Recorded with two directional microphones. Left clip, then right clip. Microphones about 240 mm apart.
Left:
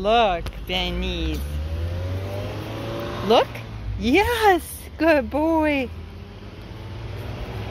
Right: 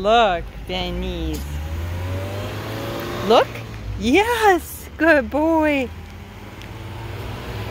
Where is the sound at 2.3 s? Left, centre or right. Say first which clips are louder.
Right 2 dB; right.